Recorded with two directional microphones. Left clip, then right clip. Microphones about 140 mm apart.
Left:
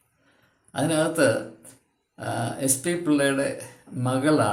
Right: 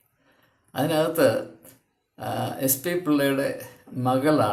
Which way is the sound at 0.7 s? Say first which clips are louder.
Right 1 dB; 15° right (ahead or behind).